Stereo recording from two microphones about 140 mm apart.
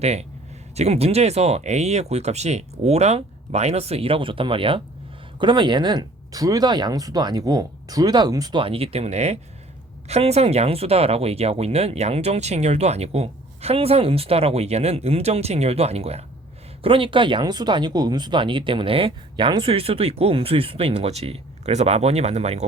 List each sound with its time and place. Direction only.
0.0 s speech: 50° right (ahead or behind)